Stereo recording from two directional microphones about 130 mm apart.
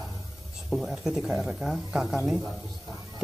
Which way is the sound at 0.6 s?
Centre (ahead or behind).